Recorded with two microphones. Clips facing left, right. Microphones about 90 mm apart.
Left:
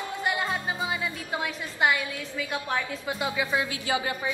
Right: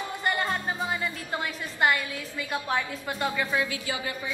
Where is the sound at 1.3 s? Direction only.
Centre (ahead or behind).